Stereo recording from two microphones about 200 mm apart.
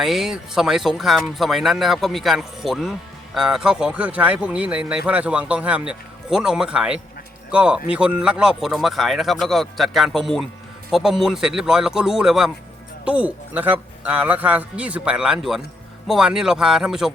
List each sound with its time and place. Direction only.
0.0 s a man's voice: centre (ahead or behind)